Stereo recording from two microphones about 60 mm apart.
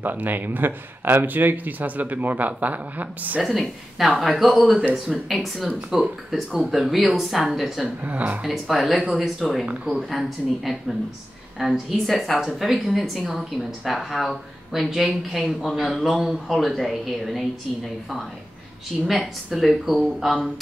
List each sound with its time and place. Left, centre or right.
0.0 s speech: right
3.4 s speech: centre
8.0 s speech: right
8.4 s speech: centre
19.0 s speech: centre